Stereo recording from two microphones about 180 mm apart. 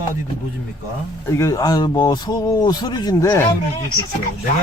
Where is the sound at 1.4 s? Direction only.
20° left (ahead or behind).